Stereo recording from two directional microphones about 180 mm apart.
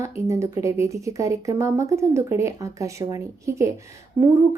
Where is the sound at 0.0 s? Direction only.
15° right (ahead or behind).